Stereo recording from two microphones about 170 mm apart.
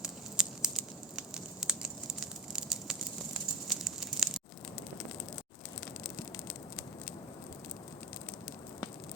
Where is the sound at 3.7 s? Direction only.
Centre (ahead or behind).